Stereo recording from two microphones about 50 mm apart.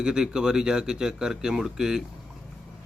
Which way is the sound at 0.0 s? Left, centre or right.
Centre.